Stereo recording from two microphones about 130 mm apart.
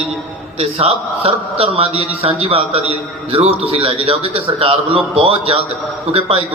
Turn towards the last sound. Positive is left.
turn(degrees=-50)  # may be behind; listen again after turning